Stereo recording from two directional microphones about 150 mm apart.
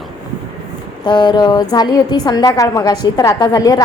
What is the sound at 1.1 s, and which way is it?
A woman's voice, 30° left (ahead or behind).